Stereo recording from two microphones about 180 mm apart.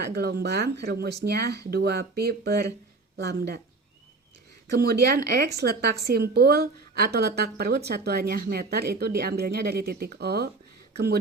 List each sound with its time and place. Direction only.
0.0 s a woman's voice: 60° right (ahead or behind)
4.7 s a woman's voice: 65° right (ahead or behind)